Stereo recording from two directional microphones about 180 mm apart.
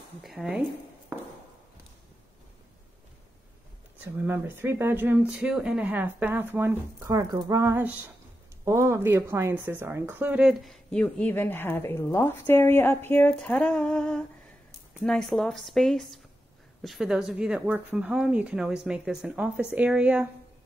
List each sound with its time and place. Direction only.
0.2 s speech: centre (ahead or behind)
4.3 s speech: 10° right (ahead or behind)